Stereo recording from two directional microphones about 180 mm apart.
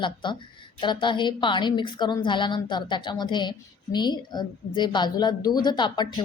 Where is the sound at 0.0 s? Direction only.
25° left (ahead or behind).